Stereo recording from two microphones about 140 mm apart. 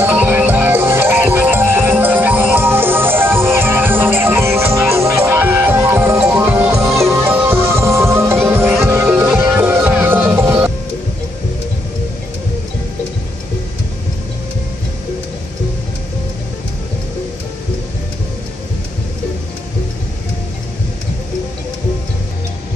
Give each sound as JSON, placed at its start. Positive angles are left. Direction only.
{"t": 0.0, "sound": "music", "side_deg": -15}